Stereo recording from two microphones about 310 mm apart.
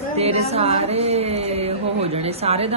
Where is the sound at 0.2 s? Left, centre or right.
Centre.